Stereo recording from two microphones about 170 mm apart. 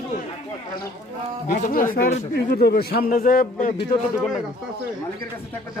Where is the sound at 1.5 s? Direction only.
50° left (ahead or behind).